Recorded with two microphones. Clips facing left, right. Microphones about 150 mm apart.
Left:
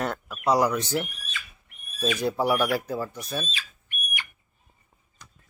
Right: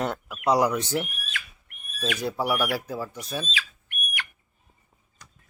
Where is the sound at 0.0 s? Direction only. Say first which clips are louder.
Right 1 dB; 15° right (ahead or behind).